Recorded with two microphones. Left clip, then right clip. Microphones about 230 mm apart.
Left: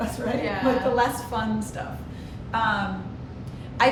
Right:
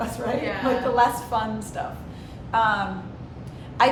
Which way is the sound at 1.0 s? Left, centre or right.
Centre.